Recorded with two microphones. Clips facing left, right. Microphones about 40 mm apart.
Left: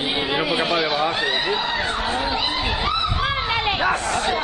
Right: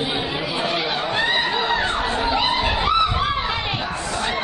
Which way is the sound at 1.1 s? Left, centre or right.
Centre.